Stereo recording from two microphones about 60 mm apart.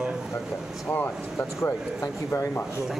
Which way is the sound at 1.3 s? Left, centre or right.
Left.